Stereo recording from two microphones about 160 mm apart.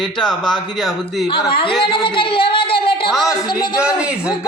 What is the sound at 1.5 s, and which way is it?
Speech, 35° left (ahead or behind).